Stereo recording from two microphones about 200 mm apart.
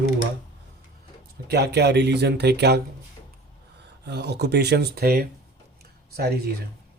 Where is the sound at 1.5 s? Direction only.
55° right (ahead or behind).